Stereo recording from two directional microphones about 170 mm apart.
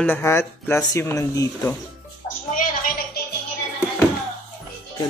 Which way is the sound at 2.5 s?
55° left (ahead or behind).